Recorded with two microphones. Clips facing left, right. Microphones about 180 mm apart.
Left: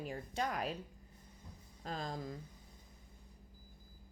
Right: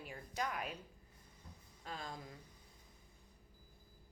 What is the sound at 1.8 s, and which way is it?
Speech, 40° left (ahead or behind).